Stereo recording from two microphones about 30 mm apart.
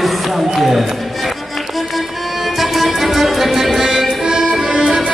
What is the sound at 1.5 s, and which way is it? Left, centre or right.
Music, centre.